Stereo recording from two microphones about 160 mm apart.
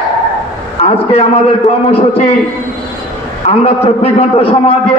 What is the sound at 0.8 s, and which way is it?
A man's voice, 40° left (ahead or behind).